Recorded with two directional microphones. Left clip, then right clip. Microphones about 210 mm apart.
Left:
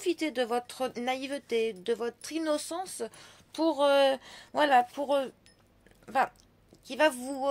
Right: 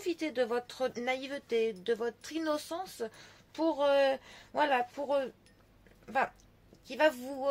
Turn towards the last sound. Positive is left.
turn(degrees=30)  # may be behind; listen again after turning